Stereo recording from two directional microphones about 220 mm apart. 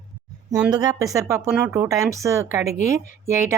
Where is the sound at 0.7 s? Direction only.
15° right (ahead or behind).